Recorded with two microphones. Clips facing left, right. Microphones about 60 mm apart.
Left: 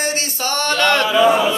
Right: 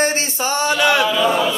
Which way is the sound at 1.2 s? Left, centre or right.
Centre.